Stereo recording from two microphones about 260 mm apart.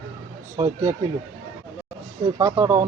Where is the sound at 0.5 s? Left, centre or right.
Centre.